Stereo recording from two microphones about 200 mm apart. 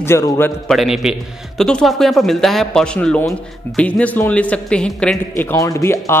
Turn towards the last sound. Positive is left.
turn(degrees=15)  # may be behind; listen again after turning